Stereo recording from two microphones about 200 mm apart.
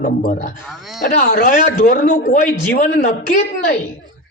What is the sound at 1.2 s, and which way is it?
A man's voice, 50° left (ahead or behind).